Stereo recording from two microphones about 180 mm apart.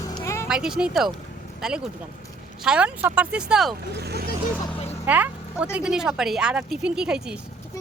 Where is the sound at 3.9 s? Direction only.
65° right (ahead or behind).